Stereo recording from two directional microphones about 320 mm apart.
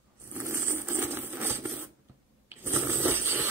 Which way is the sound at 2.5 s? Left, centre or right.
Centre.